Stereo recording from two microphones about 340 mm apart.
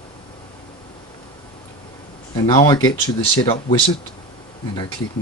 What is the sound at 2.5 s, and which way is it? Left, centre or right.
Speech, centre.